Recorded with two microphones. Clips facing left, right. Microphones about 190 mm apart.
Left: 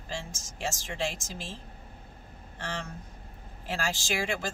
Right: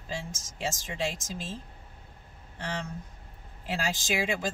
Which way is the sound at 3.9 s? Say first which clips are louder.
Right 3 dB; 20° right (ahead or behind).